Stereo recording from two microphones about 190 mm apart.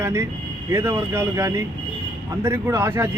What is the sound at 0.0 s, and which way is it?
A man's voice, 15° right (ahead or behind).